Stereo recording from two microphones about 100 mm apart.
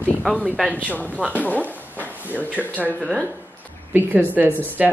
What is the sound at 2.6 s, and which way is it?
Speech, 10° left (ahead or behind).